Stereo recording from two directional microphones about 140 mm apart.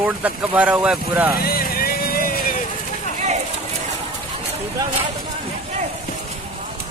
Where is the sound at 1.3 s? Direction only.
90° left.